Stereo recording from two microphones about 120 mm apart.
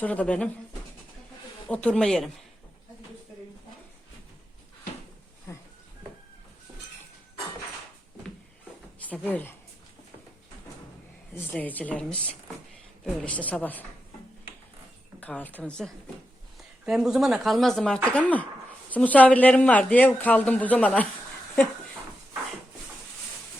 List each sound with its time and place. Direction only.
0.0 s speech: 10° left (ahead or behind)
1.6 s speech: 10° left (ahead or behind)
9.0 s speech: 15° left (ahead or behind)
11.5 s speech: 15° left (ahead or behind)
15.2 s speech: 10° left (ahead or behind)
16.8 s speech: 5° right (ahead or behind)